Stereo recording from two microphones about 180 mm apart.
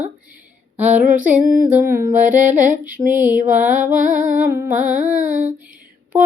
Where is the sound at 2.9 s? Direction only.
10° right (ahead or behind).